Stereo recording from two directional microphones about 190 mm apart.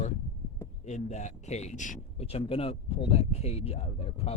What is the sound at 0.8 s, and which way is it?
Speech, 40° left (ahead or behind).